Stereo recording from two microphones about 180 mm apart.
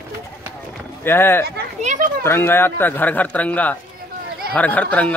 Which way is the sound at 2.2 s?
10° left (ahead or behind).